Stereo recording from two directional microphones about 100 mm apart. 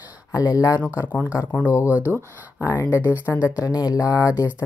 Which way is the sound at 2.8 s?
15° right (ahead or behind).